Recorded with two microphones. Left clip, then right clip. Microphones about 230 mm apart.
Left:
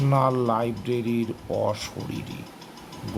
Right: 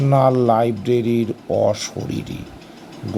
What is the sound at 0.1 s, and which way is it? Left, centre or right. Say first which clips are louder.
Speech: right 8 dB; centre.